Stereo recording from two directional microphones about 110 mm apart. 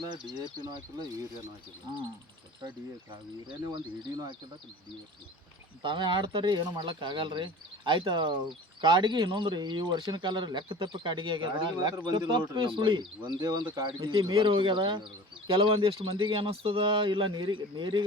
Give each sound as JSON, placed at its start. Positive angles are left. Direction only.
{"t": 0.1, "sound": "speech", "side_deg": -40}
{"t": 3.7, "sound": "speech", "side_deg": -45}
{"t": 5.8, "sound": "speech", "side_deg": -45}